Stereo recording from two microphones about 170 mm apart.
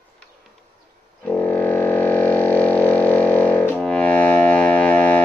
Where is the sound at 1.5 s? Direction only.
10° left (ahead or behind).